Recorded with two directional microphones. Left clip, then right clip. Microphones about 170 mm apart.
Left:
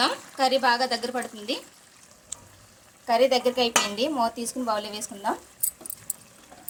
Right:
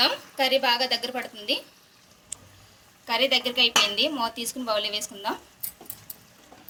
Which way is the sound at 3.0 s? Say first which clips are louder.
Left 3 dB; 60° left (ahead or behind).